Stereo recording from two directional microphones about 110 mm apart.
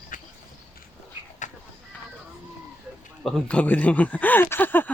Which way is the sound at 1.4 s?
90° left.